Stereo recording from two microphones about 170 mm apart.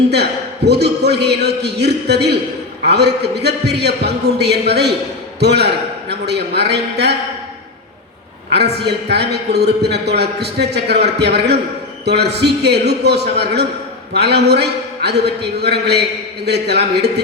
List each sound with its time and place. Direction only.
0.1 s a man's voice: 75° right (ahead or behind)
8.5 s a man's voice: 75° right (ahead or behind)